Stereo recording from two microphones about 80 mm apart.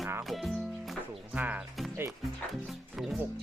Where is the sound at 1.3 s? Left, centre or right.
Right.